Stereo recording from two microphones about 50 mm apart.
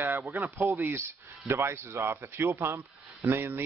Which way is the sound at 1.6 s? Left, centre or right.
Right.